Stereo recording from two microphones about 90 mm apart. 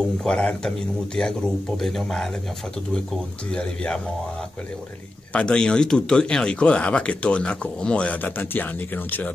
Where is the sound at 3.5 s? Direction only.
10° left (ahead or behind).